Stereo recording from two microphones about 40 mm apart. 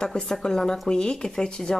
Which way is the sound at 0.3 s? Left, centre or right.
Centre.